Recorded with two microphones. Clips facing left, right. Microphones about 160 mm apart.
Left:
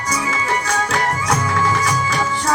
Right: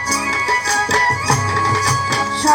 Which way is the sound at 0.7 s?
35° right (ahead or behind).